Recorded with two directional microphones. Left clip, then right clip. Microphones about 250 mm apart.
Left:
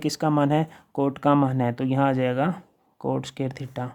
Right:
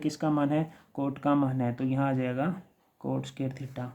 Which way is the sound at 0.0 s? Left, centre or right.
Left.